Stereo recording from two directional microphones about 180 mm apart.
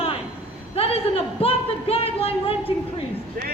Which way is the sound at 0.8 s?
35° left (ahead or behind).